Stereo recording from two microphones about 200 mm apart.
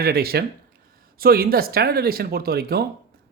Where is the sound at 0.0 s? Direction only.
50° right (ahead or behind).